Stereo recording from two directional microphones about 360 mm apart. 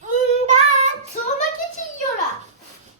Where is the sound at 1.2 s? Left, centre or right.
Left.